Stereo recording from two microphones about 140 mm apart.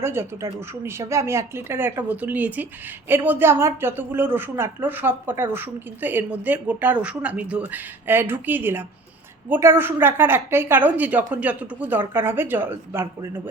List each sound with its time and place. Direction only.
0.0 s a woman's voice: 15° right (ahead or behind)